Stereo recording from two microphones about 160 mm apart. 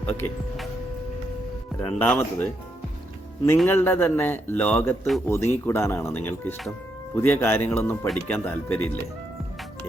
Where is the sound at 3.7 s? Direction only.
15° left (ahead or behind).